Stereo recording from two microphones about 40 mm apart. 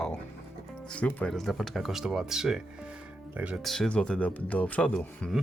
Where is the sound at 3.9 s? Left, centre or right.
Left.